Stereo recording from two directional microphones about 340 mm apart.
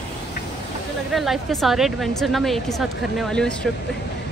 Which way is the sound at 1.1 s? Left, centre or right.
Centre.